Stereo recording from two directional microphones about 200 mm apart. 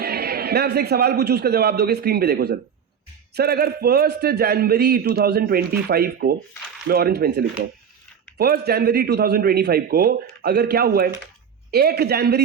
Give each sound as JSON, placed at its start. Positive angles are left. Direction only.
{"t": 0.0, "sound": "a man's voice", "side_deg": -50}